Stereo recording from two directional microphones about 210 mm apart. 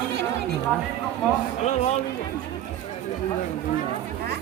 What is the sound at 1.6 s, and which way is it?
Speech, 30° left (ahead or behind).